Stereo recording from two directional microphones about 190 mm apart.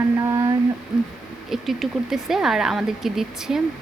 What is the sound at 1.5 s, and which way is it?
A woman's voice, centre (ahead or behind).